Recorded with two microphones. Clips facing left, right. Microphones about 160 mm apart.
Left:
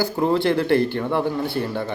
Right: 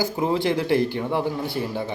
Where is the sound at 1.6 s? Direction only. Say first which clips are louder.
Left 2 dB; 10° right (ahead or behind).